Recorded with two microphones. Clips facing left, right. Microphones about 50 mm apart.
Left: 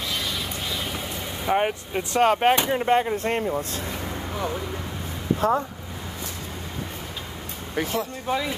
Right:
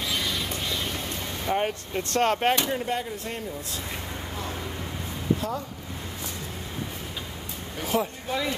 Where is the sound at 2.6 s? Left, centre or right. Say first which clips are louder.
Left 7 dB; left.